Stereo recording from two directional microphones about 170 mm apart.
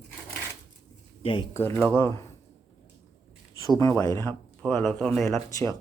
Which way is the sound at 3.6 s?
20° left (ahead or behind).